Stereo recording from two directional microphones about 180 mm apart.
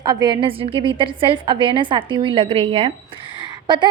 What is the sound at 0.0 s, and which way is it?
A woman's voice, 20° right (ahead or behind).